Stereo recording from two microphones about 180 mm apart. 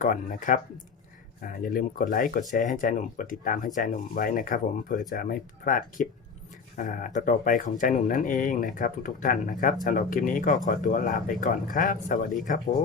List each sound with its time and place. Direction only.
0.0 s speech: 50° left (ahead or behind)